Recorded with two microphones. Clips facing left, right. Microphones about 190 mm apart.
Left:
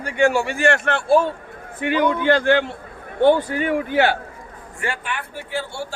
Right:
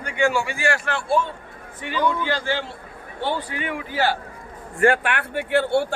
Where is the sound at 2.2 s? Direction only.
60° left (ahead or behind); by 3.7 s 45° left (ahead or behind).